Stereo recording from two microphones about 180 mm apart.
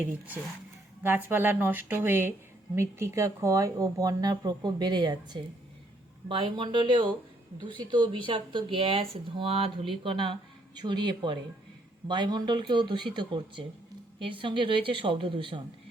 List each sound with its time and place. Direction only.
1.0 s a woman's voice: 10° right (ahead or behind); by 15.6 s 30° right (ahead or behind)